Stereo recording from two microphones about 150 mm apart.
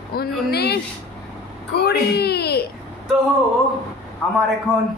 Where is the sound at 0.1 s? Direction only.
90° left.